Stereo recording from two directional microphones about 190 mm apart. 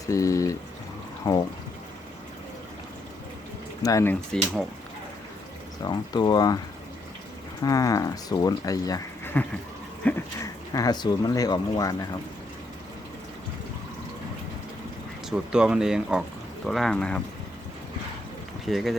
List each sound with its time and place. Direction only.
0.0 s speech: 15° left (ahead or behind)
3.8 s speech: 15° left (ahead or behind)
5.8 s speech: 20° left (ahead or behind)
7.6 s speech: 20° left (ahead or behind)
10.0 s a sound: 5° left (ahead or behind)
10.7 s speech: 20° left (ahead or behind)
15.3 s speech: 5° right (ahead or behind)
18.6 s speech: centre (ahead or behind)